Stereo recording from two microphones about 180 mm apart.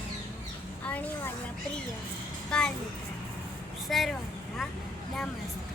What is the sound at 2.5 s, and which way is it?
Speech, 5° left (ahead or behind).